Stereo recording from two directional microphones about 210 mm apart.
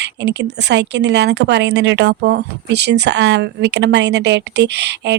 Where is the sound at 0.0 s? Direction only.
55° right (ahead or behind).